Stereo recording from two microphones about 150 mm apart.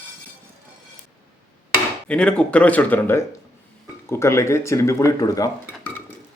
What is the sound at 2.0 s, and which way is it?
Speech, 5° left (ahead or behind).